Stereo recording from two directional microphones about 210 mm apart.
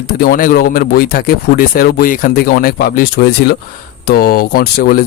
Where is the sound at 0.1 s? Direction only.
45° left (ahead or behind).